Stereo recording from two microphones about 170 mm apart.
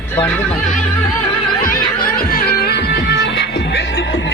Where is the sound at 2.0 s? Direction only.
55° left (ahead or behind).